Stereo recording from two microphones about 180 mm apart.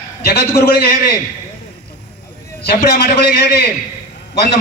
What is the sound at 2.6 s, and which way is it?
Speech, 60° left (ahead or behind).